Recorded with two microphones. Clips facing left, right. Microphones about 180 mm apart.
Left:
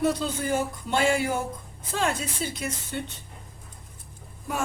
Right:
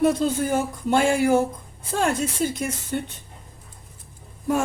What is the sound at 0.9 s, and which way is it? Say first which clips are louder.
Speech: right 6 dB; 45° right (ahead or behind).